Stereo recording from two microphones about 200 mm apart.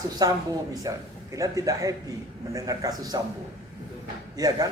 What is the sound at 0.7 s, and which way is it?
A man's voice, 15° right (ahead or behind).